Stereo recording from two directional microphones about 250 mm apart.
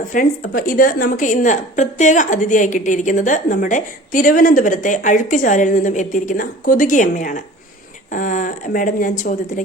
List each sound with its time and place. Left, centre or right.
0.1 s a woman's voice: left